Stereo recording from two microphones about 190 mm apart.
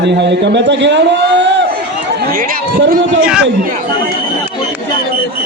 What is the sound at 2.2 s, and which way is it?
Speech, 50° right (ahead or behind).